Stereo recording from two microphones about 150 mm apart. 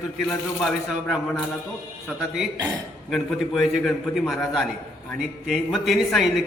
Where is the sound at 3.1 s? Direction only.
Centre (ahead or behind).